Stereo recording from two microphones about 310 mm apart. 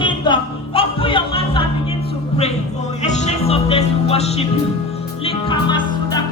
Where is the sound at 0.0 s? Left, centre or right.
Centre.